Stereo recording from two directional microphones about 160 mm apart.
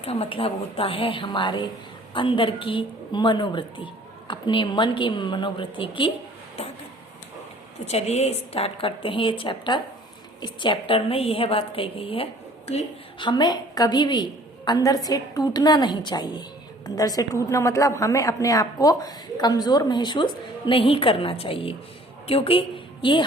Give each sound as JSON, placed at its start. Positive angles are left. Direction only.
{"t": 0.0, "sound": "a woman's voice", "side_deg": 40}
{"t": 7.9, "sound": "a woman's voice", "side_deg": 40}